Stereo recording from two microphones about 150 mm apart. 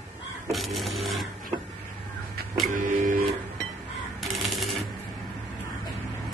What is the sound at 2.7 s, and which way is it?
Printer, 65° right (ahead or behind).